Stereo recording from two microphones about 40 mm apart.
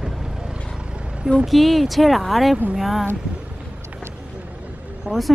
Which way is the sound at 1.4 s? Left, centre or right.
Centre.